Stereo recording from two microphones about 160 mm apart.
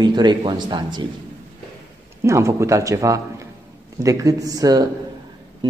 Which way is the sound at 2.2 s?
20° right (ahead or behind).